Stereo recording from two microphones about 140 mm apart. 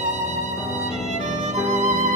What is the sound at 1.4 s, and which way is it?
Music, 55° right (ahead or behind).